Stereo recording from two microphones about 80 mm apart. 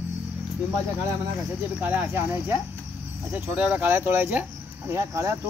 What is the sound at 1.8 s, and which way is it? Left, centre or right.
Speech, centre.